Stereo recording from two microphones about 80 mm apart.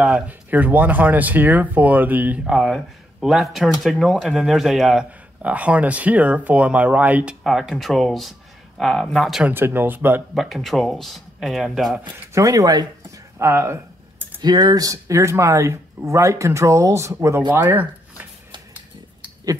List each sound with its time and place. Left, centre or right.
0.0 s speech: centre
2.4 s speech: centre
5.4 s speech: centre
7.4 s speech: centre
9.5 s speech: right
10.3 s speech: centre
12.4 s speech: right
13.4 s speech: right
14.4 s speech: right